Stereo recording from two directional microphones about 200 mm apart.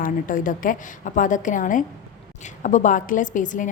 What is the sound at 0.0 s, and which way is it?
A woman's voice, 40° left (ahead or behind).